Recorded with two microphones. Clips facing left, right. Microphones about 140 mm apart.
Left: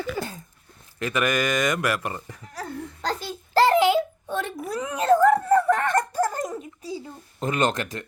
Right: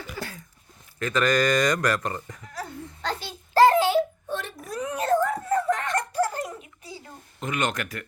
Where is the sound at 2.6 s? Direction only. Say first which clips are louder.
Left 3 dB; 40° left (ahead or behind).